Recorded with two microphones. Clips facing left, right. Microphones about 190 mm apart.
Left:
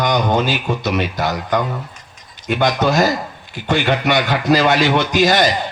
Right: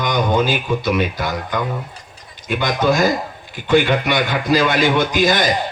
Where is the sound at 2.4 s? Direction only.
50° right (ahead or behind).